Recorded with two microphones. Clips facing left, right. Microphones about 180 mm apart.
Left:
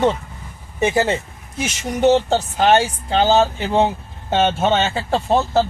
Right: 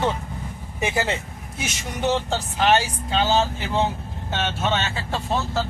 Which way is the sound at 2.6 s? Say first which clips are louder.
Left 3 dB; 45° left (ahead or behind).